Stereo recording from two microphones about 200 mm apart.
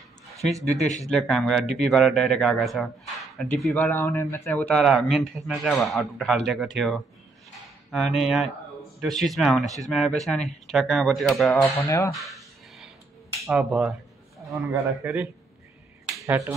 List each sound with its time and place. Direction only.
0.7 s speech: 35° left (ahead or behind)
1.0 s speech: centre (ahead or behind)
12.1 s a sound: centre (ahead or behind)
13.5 s a man's voice: 5° right (ahead or behind)
16.3 s a man's voice: 15° right (ahead or behind)